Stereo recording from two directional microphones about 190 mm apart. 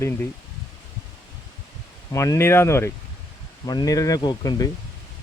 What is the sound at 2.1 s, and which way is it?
Speech, 15° left (ahead or behind).